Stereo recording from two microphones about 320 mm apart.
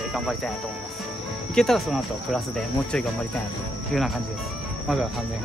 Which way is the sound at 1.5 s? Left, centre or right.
Centre.